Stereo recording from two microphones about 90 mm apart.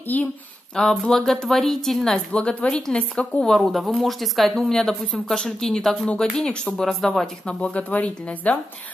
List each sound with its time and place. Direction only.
0.0 s speech: 20° left (ahead or behind)
0.7 s a woman's voice: 5° left (ahead or behind)